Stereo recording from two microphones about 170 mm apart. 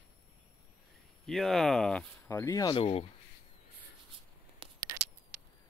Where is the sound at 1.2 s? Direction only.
Centre (ahead or behind); by 3.0 s 35° left (ahead or behind).